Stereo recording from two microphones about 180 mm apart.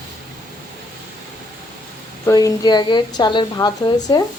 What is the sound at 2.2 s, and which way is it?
A woman's voice, 20° left (ahead or behind).